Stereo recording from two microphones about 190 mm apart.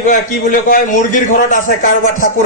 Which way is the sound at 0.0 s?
45° left (ahead or behind).